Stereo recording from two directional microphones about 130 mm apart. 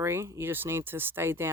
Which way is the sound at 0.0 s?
20° right (ahead or behind).